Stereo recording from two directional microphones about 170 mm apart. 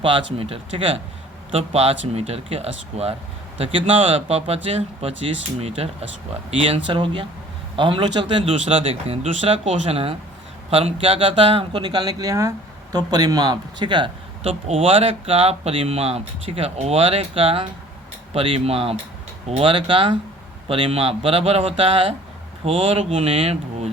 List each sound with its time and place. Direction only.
0.0 s speech: 30° right (ahead or behind)